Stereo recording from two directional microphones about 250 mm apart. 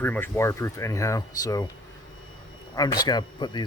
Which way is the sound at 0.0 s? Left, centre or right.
Centre.